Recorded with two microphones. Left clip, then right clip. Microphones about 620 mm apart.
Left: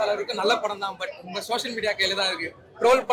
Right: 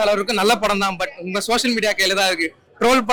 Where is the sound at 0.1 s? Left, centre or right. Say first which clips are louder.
Right 6 dB; right.